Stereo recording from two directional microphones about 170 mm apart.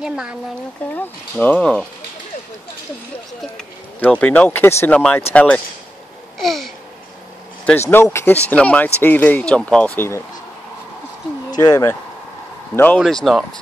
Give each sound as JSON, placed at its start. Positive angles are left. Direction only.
{"t": 0.0, "sound": "speech", "side_deg": -5}
{"t": 0.9, "sound": "speech", "side_deg": 10}
{"t": 3.5, "sound": "speech", "side_deg": 5}
{"t": 6.3, "sound": "a sound", "side_deg": 0}
{"t": 7.9, "sound": "speech", "side_deg": 15}
{"t": 11.5, "sound": "speech", "side_deg": 20}